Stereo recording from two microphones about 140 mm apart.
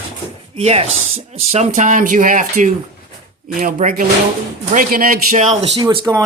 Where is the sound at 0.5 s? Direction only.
45° right (ahead or behind); by 4.0 s 60° right (ahead or behind).